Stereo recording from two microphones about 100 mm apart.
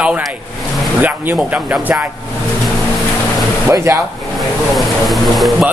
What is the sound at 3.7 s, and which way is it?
Speech, 35° right (ahead or behind).